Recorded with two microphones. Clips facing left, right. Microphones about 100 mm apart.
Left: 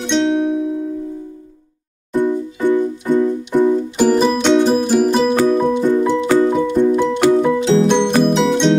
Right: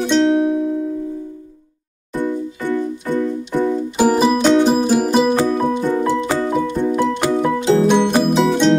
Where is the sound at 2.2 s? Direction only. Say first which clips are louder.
Left 4 dB; 15° left (ahead or behind).